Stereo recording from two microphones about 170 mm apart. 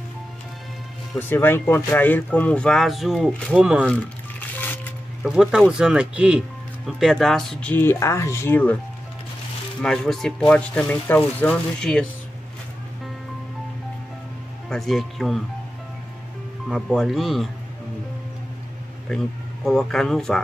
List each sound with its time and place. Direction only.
1.3 s speech: 15° left (ahead or behind); by 3.8 s 5° right (ahead or behind)
5.2 s speech: 5° right (ahead or behind)
9.8 s speech: 5° left (ahead or behind)
14.7 s speech: centre (ahead or behind)
16.6 s speech: centre (ahead or behind)
19.0 s speech: 5° left (ahead or behind)